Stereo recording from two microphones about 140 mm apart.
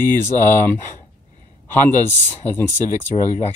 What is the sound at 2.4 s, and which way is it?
Speech, 15° left (ahead or behind).